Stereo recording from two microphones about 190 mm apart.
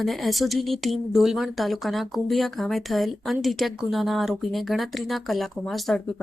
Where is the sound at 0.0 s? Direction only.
Centre (ahead or behind).